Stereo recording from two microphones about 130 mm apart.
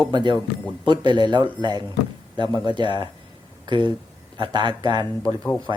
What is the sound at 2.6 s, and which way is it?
Speech, 35° right (ahead or behind).